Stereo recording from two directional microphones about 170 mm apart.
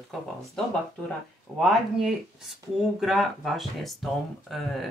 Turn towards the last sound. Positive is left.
turn(degrees=0)  # may be behind; listen again after turning